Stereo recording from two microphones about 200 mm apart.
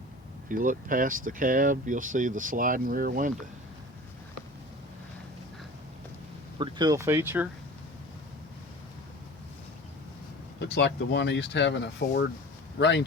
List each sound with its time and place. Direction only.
0.4 s speech: 40° right (ahead or behind)
6.6 s speech: 20° right (ahead or behind)
10.6 s speech: 55° left (ahead or behind)